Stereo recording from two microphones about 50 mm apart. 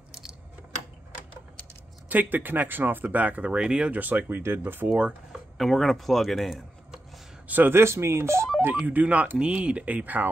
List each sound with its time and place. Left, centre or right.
0.1 s coin: centre
2.0 s speech: right
3.5 s speech: centre
4.0 s speech: right
4.3 s speech: right
4.8 s speech: right
5.3 s chopping: centre
7.4 s a man's voice: right
7.7 s speech: right
8.8 s speech: right